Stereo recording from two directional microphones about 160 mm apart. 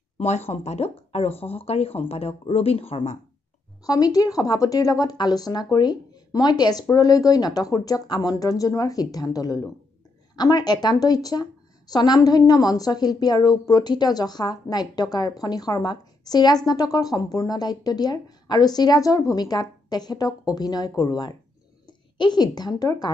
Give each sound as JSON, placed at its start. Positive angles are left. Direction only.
{"t": 0.2, "sound": "speech", "side_deg": 40}
{"t": 3.8, "sound": "a woman's voice", "side_deg": 25}